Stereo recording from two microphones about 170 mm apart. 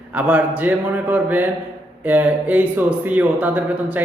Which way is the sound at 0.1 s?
10° right (ahead or behind).